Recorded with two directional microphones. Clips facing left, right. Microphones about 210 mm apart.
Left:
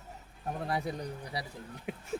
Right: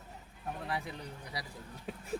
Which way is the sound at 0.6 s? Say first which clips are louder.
Left 6 dB; 40° left (ahead or behind).